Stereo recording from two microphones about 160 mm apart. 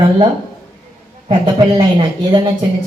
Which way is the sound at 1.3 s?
30° right (ahead or behind).